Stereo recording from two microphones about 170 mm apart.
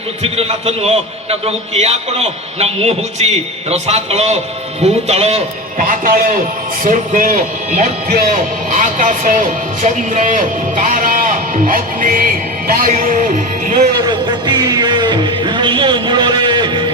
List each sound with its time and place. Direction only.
0.2 s a man's voice: 40° right (ahead or behind)
5.8 s a man's voice: 55° right (ahead or behind)
13.9 s music: 25° right (ahead or behind)